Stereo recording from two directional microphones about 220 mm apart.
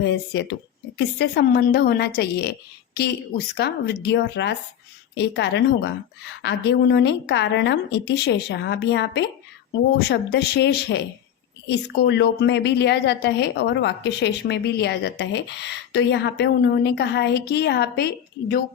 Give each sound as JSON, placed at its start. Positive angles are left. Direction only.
{"t": 0.0, "sound": "a woman's voice", "side_deg": 55}